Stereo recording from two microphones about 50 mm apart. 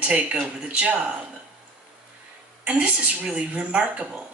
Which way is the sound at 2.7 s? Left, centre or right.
Right.